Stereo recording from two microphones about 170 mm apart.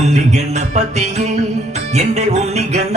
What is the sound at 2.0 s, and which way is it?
Music, 40° right (ahead or behind).